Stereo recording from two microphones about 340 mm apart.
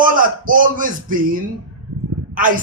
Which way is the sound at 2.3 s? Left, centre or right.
Right.